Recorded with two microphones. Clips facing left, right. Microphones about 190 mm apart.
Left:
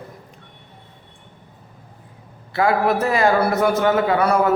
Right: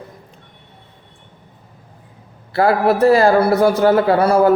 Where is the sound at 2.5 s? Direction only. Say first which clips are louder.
Right 3 dB; 35° right (ahead or behind).